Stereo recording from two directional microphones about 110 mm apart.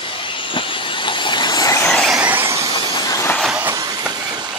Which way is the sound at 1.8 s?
5° left (ahead or behind).